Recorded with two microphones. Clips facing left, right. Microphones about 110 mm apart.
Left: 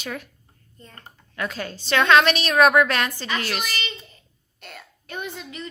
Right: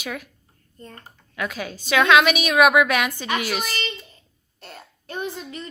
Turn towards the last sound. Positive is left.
turn(degrees=-35)  # may be behind; listen again after turning